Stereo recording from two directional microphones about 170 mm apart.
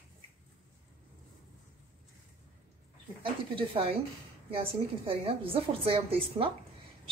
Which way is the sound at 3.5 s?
30° right (ahead or behind).